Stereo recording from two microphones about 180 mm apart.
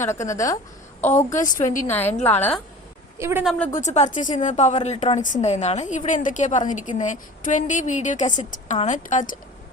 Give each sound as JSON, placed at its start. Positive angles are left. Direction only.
{"t": 0.0, "sound": "a woman's voice", "side_deg": 15}
{"t": 1.0, "sound": "a woman's voice", "side_deg": 40}
{"t": 1.9, "sound": "a woman's voice", "side_deg": 10}
{"t": 3.2, "sound": "a woman's voice", "side_deg": -15}
{"t": 3.8, "sound": "a woman's voice", "side_deg": 40}